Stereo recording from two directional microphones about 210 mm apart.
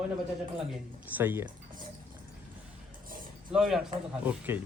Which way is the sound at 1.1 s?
10° right (ahead or behind).